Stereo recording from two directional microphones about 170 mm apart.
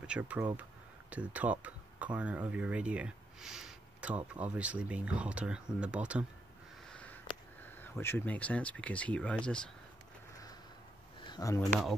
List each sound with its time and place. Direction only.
0.0 s speech: 5° right (ahead or behind)
6.9 s sniff: 5° left (ahead or behind)
7.7 s speech: 15° left (ahead or behind)
11.2 s speech: 20° left (ahead or behind)